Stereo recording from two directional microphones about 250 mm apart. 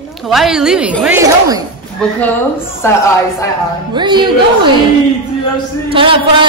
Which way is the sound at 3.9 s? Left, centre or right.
Centre.